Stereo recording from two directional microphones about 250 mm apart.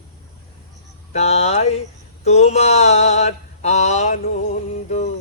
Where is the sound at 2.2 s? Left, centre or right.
Left.